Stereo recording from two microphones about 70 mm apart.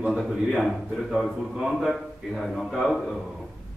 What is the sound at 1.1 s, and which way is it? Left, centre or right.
A man's voice, centre.